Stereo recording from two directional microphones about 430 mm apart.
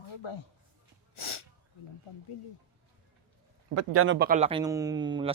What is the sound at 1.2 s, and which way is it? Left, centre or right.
Snort, left.